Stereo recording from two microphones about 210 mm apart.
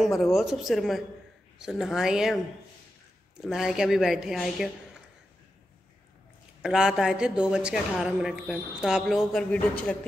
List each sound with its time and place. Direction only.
0.0 s a man's voice: centre (ahead or behind)
3.3 s a man's voice: centre (ahead or behind)
6.6 s a man's voice: 5° right (ahead or behind)